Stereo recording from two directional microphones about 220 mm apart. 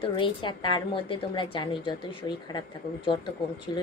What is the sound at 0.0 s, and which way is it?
A woman's voice, 20° left (ahead or behind).